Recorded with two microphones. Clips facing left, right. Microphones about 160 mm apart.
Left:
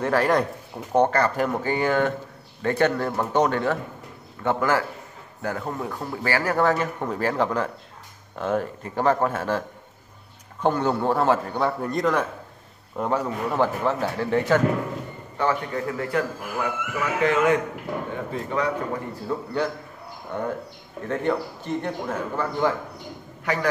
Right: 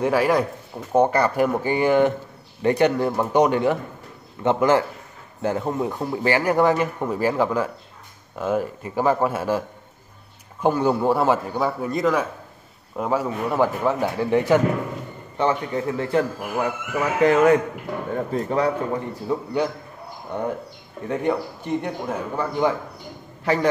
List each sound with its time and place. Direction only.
0.0 s a man's voice: 10° right (ahead or behind); by 18.7 s 40° right (ahead or behind)
19.2 s a man's voice: 15° right (ahead or behind)
23.4 s a man's voice: 30° right (ahead or behind)